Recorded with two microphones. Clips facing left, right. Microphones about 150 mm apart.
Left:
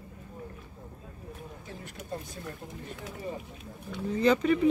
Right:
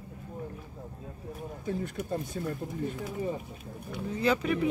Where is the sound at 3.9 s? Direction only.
5° right (ahead or behind).